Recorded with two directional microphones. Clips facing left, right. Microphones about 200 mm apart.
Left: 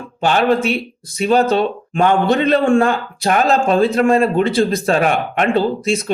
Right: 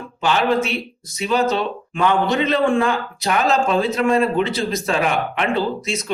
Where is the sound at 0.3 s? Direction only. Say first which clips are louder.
Left 3 dB; 55° left (ahead or behind).